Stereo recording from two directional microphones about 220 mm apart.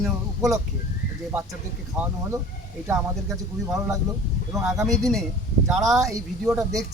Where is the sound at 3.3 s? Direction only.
Centre (ahead or behind).